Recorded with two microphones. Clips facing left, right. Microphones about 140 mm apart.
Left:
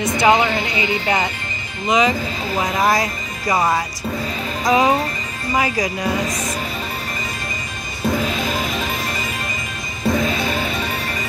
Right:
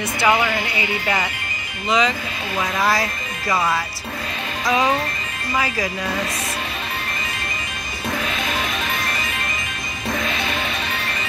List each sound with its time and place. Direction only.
0.0 s speech: 20° left (ahead or behind)
4.6 s speech: 25° left (ahead or behind)
8.1 s music: 35° left (ahead or behind)